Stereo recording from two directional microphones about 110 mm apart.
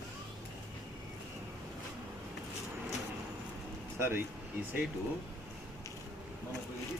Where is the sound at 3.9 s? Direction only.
20° right (ahead or behind).